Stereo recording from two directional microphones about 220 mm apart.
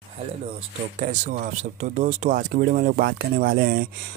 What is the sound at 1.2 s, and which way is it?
Speech, 35° right (ahead or behind).